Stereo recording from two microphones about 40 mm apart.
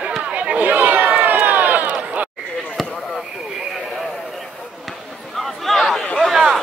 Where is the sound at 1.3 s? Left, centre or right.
Right.